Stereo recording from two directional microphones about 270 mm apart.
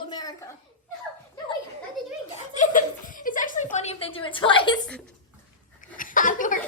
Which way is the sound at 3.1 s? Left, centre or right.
Left.